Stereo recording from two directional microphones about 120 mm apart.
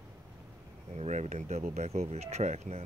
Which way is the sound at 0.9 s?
70° right (ahead or behind).